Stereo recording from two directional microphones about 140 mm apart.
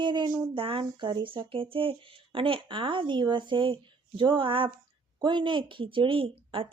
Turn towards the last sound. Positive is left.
turn(degrees=-40)  # may be behind; listen again after turning